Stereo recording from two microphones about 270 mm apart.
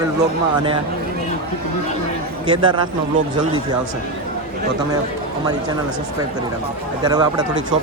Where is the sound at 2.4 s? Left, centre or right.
Centre.